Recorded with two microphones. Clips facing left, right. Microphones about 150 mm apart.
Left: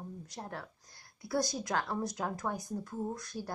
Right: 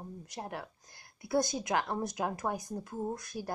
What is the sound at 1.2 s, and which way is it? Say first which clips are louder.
Speech: right 3 dB; 20° right (ahead or behind).